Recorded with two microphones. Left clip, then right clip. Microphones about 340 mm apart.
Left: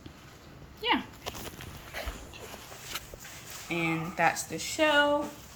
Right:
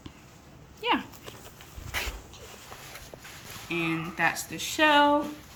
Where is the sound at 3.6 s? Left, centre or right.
Centre.